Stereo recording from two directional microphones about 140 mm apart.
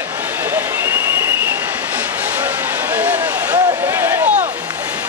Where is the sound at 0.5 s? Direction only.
15° right (ahead or behind).